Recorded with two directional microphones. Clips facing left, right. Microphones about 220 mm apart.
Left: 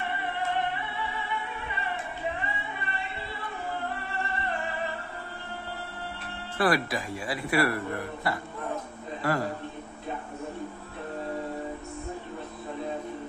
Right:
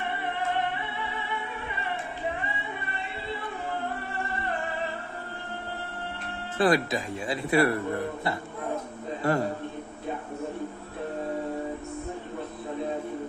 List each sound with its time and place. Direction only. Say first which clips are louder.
6.6 s a man's voice: right 2 dB; 20° right (ahead or behind)